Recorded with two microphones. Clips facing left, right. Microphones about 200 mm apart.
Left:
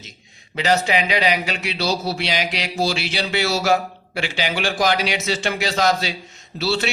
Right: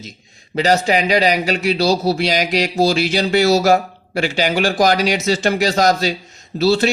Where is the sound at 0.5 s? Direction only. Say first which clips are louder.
Right 4 dB; 40° right (ahead or behind).